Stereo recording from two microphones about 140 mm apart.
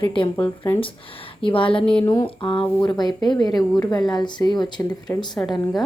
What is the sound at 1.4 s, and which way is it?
A woman's voice, 40° left (ahead or behind).